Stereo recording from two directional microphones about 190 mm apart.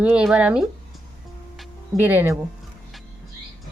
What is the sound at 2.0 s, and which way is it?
Speech, 10° right (ahead or behind).